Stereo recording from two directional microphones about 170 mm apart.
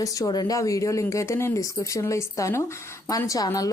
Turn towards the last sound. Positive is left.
turn(degrees=20)  # may be behind; listen again after turning